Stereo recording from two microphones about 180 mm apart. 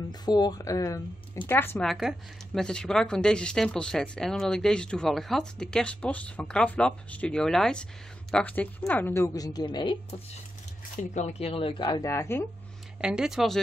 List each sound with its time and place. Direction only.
0.2 s a woman's voice: 20° left (ahead or behind)
1.9 s a woman's voice: centre (ahead or behind); by 10.2 s 25° left (ahead or behind)
11.0 s a woman's voice: 40° left (ahead or behind); by 12.4 s 15° left (ahead or behind)
13.0 s speech: 5° right (ahead or behind)